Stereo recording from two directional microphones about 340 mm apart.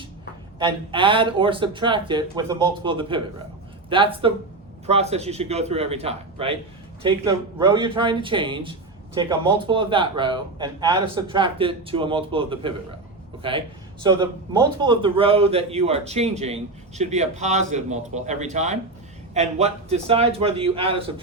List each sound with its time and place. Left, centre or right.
0.6 s a man's voice: centre